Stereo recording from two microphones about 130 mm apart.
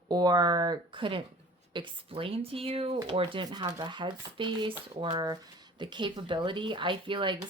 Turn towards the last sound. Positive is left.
turn(degrees=-40)  # may be behind; listen again after turning